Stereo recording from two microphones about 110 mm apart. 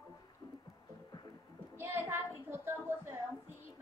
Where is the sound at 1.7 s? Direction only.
20° right (ahead or behind).